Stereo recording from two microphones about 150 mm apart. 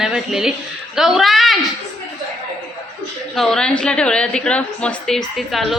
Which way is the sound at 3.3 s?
5° left (ahead or behind).